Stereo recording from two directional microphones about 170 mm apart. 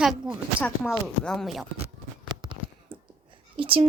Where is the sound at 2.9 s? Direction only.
30° right (ahead or behind).